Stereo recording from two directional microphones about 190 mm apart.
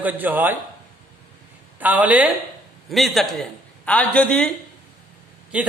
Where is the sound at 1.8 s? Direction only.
10° right (ahead or behind).